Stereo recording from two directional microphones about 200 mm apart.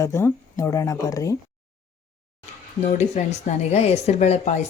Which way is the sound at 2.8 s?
35° left (ahead or behind).